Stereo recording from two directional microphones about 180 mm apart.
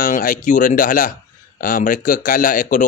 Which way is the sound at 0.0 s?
50° left (ahead or behind).